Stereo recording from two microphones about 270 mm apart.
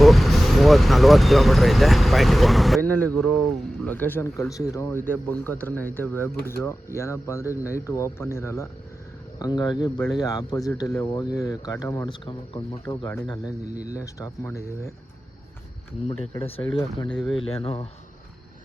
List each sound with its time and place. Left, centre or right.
0.0 s speech: centre
16.3 s speech: left